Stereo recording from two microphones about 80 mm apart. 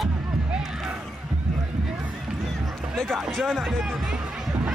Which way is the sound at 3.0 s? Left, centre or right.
Centre.